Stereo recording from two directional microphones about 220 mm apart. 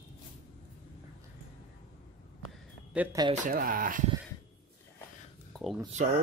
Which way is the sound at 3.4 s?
40° right (ahead or behind).